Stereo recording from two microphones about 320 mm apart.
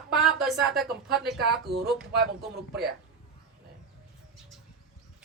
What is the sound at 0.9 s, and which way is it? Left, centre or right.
Speech, right.